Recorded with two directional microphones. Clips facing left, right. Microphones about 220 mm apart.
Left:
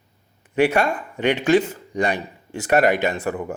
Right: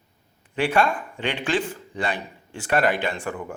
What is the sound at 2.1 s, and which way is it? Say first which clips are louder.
Speech: left 5 dB; 10° left (ahead or behind).